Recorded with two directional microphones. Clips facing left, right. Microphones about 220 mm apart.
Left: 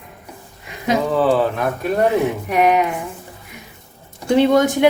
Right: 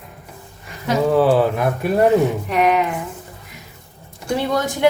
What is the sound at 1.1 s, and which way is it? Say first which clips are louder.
Speech: right 3 dB; 10° right (ahead or behind).